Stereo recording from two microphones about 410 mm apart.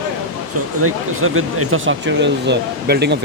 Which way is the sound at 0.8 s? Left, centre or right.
Right.